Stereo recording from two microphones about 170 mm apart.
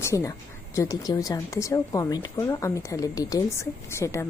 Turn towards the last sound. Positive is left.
turn(degrees=15)  # may be behind; listen again after turning